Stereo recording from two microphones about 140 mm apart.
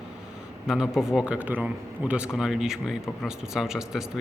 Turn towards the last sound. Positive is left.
turn(degrees=-5)  # may be behind; listen again after turning